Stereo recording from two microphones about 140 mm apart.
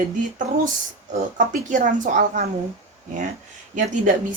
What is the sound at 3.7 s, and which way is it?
Speech, 65° right (ahead or behind).